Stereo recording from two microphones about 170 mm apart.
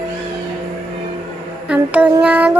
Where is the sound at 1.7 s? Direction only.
5° right (ahead or behind).